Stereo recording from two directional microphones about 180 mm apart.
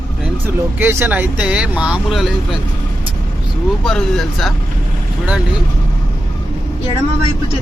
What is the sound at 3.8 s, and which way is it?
Speech, 5° left (ahead or behind).